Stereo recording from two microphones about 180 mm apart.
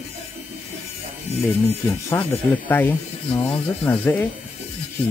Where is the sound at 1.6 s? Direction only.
10° left (ahead or behind).